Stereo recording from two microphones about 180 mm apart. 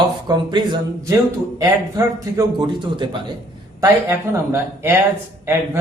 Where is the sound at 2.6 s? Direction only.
25° right (ahead or behind).